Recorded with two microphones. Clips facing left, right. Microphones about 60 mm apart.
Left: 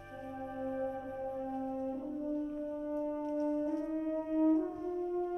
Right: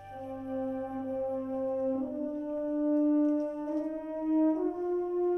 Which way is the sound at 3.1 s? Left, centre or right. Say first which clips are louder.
Right 6 dB; centre.